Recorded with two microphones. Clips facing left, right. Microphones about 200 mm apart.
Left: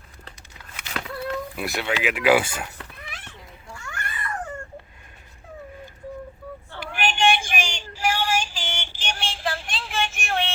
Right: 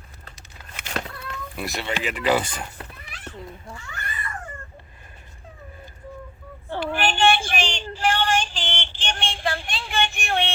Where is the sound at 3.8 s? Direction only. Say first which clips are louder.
Left 4 dB; 80° left.